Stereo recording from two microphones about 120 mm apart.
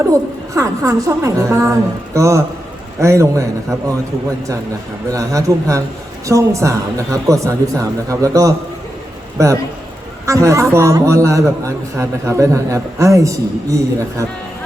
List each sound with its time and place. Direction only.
0.0 s a man's voice: 25° right (ahead or behind)
5.0 s a man's voice: 25° right (ahead or behind)